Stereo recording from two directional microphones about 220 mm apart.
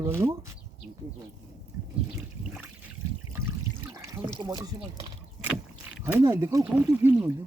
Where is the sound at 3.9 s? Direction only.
15° right (ahead or behind).